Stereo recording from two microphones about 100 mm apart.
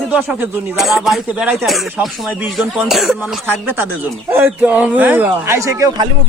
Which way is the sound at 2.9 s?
5° right (ahead or behind).